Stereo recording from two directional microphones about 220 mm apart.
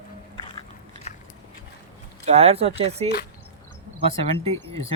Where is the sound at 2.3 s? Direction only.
30° right (ahead or behind).